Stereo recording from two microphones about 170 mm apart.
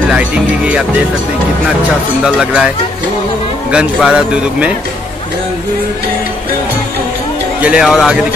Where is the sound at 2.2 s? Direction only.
5° right (ahead or behind).